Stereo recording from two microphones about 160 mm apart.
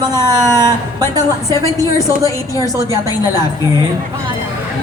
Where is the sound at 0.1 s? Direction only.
15° left (ahead or behind).